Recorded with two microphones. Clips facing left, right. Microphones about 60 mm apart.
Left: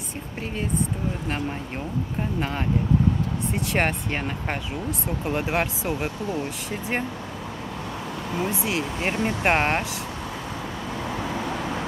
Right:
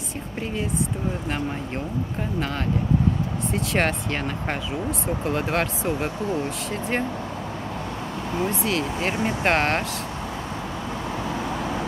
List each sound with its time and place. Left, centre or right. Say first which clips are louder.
3.5 s speech: right 1 dB; centre
8.5 s speech: right 2 dB; centre
9.1 s speech: even; centre
9.4 s speech: even; centre